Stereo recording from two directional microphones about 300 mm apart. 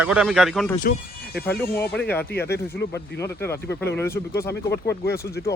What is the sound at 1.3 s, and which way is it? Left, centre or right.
Speech, left.